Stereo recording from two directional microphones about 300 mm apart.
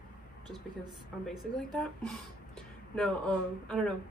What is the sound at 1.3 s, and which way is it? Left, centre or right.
Speech, centre.